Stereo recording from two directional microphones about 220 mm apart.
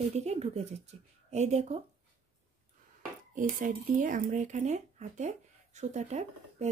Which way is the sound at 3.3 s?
35° right (ahead or behind).